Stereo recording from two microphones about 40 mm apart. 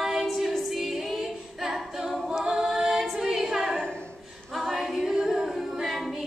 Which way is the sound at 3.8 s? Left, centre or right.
Left.